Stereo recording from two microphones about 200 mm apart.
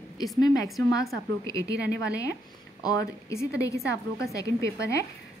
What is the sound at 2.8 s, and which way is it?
A woman's voice, 15° left (ahead or behind).